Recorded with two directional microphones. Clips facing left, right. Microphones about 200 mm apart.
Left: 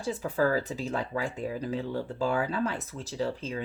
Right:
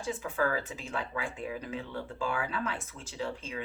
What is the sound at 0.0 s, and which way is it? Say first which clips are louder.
Speech: left 4 dB; 40° left (ahead or behind).